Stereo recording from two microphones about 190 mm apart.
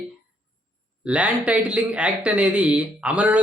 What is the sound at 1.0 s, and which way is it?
A man's voice, 5° right (ahead or behind).